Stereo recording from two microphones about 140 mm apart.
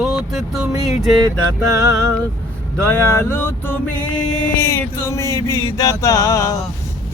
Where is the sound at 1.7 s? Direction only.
25° right (ahead or behind).